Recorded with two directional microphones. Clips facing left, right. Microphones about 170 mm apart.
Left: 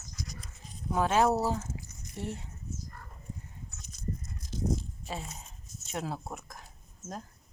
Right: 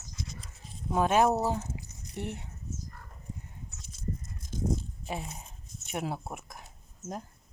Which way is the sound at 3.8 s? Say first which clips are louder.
Even; 30° right (ahead or behind).